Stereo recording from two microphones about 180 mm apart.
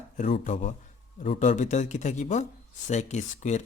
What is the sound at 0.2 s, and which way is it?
Speech, 40° left (ahead or behind).